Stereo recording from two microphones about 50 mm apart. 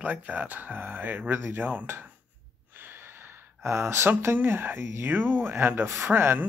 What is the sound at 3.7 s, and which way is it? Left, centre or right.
Speech, right.